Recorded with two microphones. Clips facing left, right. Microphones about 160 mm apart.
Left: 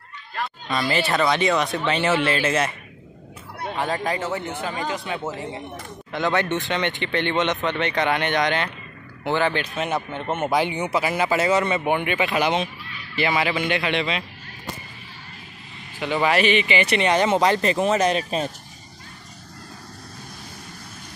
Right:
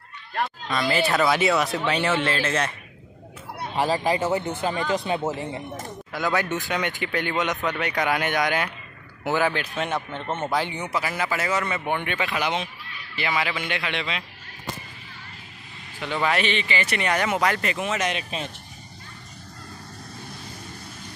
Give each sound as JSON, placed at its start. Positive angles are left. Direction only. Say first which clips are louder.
{"t": 0.7, "sound": "speech", "louder": "left 1 dB", "side_deg": 0}
{"t": 3.7, "sound": "speech", "louder": "right 3 dB", "side_deg": -5}
{"t": 4.6, "sound": "speech", "louder": "right 5 dB", "side_deg": -30}
{"t": 6.1, "sound": "a man's voice", "louder": "left 3 dB", "side_deg": 0}
{"t": 11.9, "sound": "a man's voice", "louder": "left 3 dB", "side_deg": 10}
{"t": 12.3, "sound": "speech", "louder": "left 5 dB", "side_deg": 25}
{"t": 16.0, "sound": "speech", "louder": "left 4 dB", "side_deg": 5}